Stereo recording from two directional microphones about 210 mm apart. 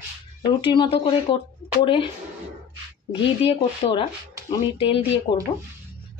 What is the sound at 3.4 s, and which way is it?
Speech, 25° left (ahead or behind).